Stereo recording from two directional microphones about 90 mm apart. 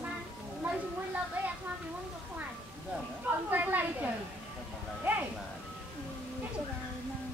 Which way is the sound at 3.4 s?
20° right (ahead or behind).